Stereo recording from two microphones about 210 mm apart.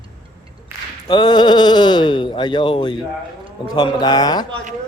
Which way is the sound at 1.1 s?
20° left (ahead or behind).